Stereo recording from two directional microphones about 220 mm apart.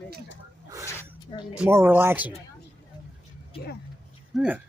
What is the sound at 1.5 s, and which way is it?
Speech, 5° right (ahead or behind).